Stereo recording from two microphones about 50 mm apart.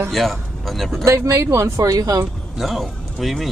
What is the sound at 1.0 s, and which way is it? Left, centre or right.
Speech, right.